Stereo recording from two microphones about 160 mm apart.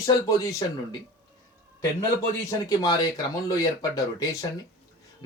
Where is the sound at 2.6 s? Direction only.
25° left (ahead or behind).